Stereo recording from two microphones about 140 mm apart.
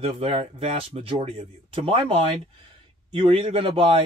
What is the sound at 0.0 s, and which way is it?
A man's voice, 40° right (ahead or behind).